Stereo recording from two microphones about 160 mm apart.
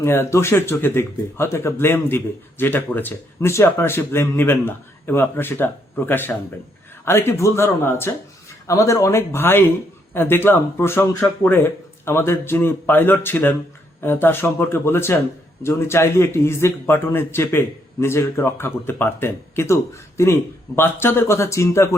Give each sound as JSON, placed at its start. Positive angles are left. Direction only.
{"t": 0.0, "sound": "speech", "side_deg": 15}